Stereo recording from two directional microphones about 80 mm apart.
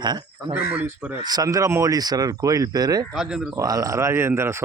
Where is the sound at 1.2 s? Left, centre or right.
Right.